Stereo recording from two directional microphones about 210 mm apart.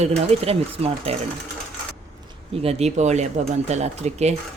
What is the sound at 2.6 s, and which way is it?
Speech, 30° right (ahead or behind).